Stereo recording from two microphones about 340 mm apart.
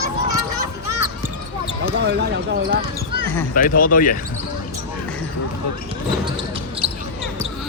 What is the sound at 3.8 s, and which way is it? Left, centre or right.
Speech, left.